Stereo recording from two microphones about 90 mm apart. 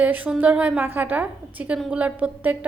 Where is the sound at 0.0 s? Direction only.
15° right (ahead or behind).